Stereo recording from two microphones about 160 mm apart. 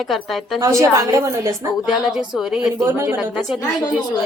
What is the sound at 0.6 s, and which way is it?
A woman's voice, 20° right (ahead or behind).